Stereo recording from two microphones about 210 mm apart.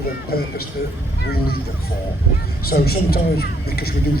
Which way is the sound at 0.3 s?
45° left (ahead or behind).